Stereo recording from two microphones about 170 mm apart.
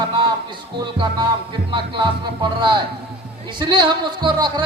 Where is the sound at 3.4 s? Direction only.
25° right (ahead or behind).